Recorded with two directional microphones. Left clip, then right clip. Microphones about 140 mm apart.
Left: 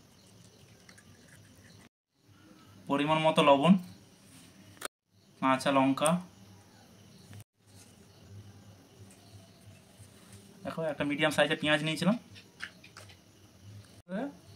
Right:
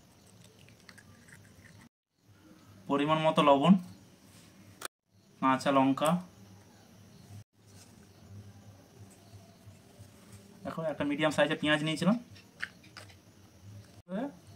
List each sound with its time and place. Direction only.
2.9 s speech: 15° left (ahead or behind)
5.4 s speech: 15° left (ahead or behind)
10.6 s speech: 20° left (ahead or behind)
14.1 s a sound: 20° left (ahead or behind)